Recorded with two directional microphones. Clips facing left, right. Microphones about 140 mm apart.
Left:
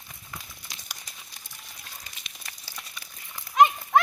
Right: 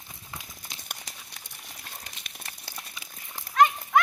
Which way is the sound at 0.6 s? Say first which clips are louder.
Right 2 dB; 55° right (ahead or behind).